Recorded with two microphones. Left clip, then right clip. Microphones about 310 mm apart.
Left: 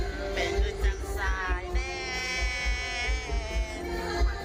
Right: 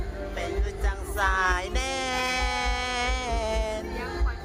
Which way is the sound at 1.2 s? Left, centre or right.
Right.